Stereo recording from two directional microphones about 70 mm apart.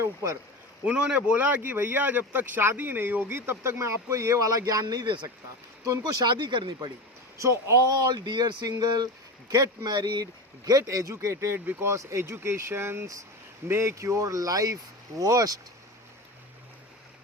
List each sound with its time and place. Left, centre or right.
0.0 s speech: right
0.9 s speech: centre; by 5.3 s right
5.8 s speech: right
7.3 s speech: right
7.9 s speech: right
10.8 s speech: right